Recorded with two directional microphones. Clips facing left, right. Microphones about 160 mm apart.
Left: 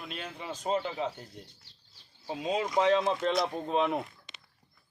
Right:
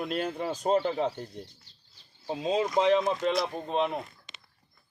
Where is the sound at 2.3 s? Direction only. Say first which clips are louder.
Right 3 dB; 25° right (ahead or behind).